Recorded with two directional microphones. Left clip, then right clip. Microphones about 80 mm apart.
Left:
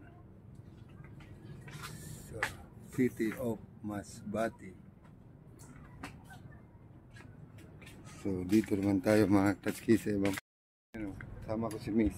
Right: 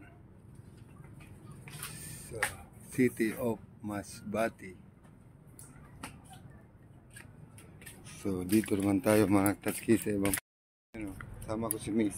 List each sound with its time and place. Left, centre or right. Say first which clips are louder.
2.0 s a sound: right 3 dB; right
2.9 s speech: right 3 dB; right
8.0 s speech: right 1 dB; centre
9.3 s speech: right 1 dB; centre
10.9 s speech: even; centre